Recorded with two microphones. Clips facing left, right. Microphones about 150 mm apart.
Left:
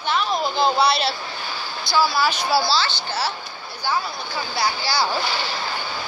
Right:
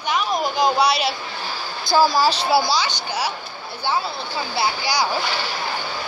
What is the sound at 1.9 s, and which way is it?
Speech, 45° right (ahead or behind).